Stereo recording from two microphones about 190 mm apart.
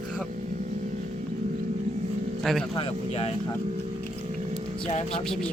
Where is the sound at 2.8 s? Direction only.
30° left (ahead or behind).